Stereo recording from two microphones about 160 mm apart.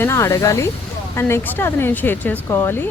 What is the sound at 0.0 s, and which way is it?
Speech, 15° left (ahead or behind).